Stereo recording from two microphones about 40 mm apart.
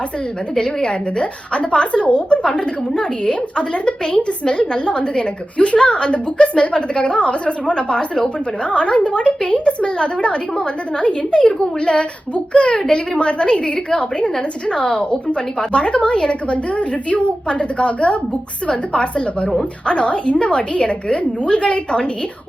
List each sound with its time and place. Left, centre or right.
0.5 s a woman's voice: left